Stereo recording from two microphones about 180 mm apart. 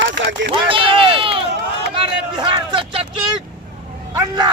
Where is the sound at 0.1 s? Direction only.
80° right.